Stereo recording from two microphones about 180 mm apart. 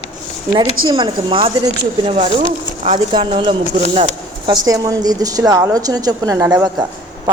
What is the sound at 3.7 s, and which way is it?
Speech, 50° right (ahead or behind).